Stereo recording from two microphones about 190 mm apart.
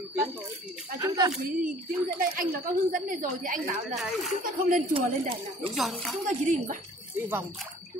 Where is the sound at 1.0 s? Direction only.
20° right (ahead or behind).